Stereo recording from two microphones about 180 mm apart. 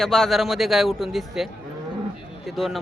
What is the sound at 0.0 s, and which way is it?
Speech, centre (ahead or behind).